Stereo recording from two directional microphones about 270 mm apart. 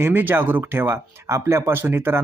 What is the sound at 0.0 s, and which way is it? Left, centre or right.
Speech, centre.